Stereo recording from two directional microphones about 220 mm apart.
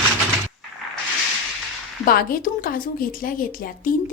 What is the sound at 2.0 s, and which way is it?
A woman's voice, 40° left (ahead or behind).